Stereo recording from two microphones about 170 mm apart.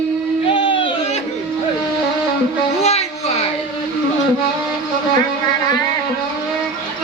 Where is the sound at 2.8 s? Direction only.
40° left (ahead or behind).